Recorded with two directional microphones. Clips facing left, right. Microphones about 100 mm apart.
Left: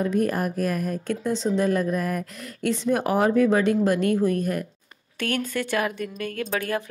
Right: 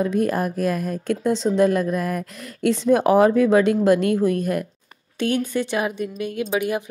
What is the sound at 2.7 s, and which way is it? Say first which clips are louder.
Speech: right 6 dB; 25° right (ahead or behind).